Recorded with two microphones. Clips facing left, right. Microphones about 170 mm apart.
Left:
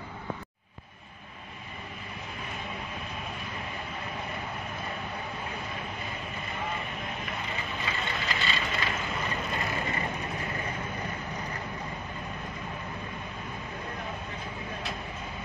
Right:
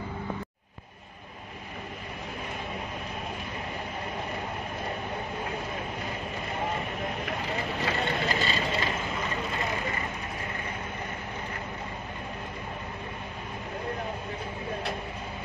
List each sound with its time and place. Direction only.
7.2 s vehicle: 65° right (ahead or behind)
8.2 s vehicle: 40° right (ahead or behind)